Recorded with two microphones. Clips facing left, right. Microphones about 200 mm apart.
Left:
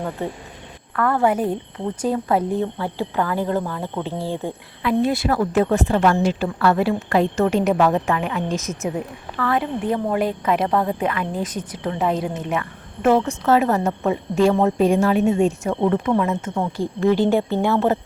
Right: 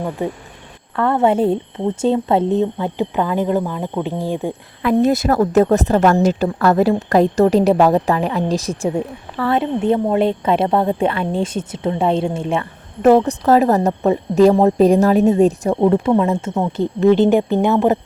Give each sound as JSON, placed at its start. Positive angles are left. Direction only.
{"t": 0.2, "sound": "speech", "side_deg": -15}
{"t": 0.9, "sound": "a woman's voice", "side_deg": -25}
{"t": 4.8, "sound": "a woman's voice", "side_deg": -45}